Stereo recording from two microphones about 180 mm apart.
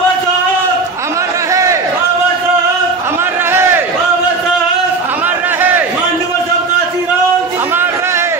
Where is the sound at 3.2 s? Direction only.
15° right (ahead or behind).